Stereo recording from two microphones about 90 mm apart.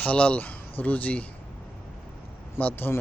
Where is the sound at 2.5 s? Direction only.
20° left (ahead or behind).